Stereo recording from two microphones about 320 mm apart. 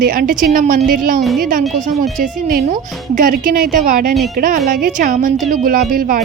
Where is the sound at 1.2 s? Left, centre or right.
Centre.